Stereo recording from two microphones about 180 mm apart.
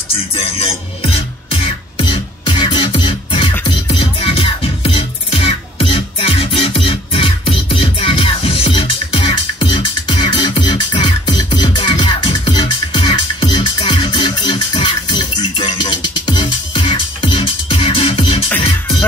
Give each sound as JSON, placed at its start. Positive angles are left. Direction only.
{"t": 0.3, "sound": "music", "side_deg": 35}